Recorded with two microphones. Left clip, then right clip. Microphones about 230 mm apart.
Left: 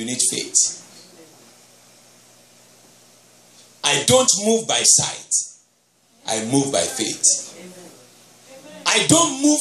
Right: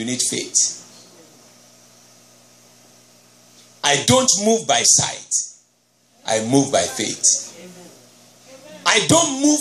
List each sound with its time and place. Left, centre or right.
0.0 s speech: right
3.8 s speech: right
8.8 s a man's voice: right